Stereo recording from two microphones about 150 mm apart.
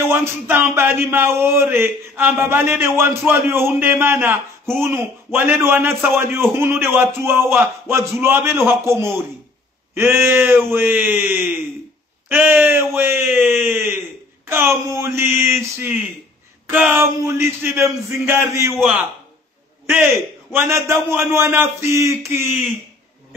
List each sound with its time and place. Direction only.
0.0 s speech: 15° right (ahead or behind)
20.5 s speech: 15° right (ahead or behind)